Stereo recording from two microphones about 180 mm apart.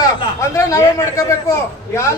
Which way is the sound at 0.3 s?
15° left (ahead or behind).